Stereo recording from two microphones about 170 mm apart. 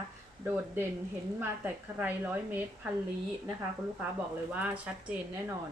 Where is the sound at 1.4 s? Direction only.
10° right (ahead or behind).